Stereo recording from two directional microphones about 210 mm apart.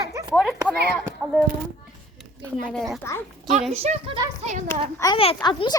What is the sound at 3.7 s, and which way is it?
A child's voice, 30° right (ahead or behind).